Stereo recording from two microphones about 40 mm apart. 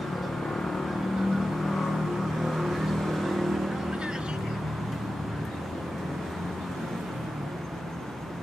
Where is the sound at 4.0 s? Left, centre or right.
Centre.